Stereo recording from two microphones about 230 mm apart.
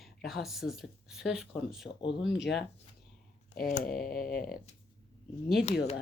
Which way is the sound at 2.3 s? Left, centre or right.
Left.